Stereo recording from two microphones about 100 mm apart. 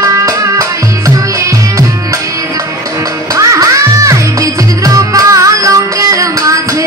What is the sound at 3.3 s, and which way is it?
Music, 35° right (ahead or behind).